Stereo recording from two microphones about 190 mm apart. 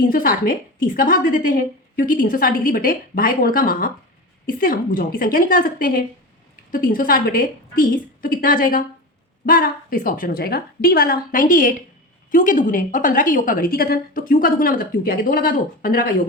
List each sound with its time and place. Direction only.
0.0 s a woman's voice: 50° left (ahead or behind)